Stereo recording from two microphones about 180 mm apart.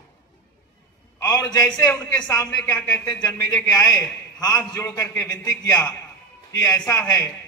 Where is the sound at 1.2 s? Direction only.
20° left (ahead or behind).